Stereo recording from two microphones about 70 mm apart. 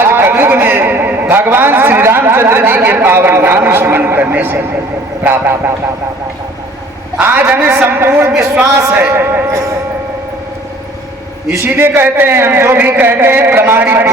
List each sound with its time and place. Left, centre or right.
0.0 s a man's voice: right
7.2 s a man's voice: right
11.4 s a man's voice: right